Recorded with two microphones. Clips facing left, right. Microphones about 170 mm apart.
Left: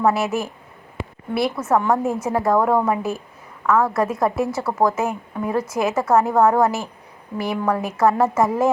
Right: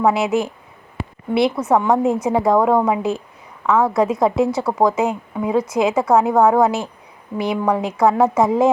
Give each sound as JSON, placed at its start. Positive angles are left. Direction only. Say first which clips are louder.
{"t": 0.0, "sound": "a woman's voice", "louder": "right 3 dB", "side_deg": -20}